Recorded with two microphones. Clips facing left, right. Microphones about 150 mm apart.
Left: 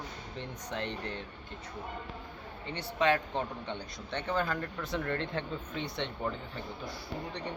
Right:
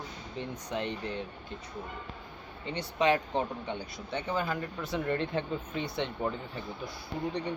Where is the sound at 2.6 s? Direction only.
15° right (ahead or behind).